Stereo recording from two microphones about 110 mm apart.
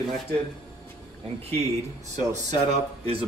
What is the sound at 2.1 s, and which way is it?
Speech, 90° right.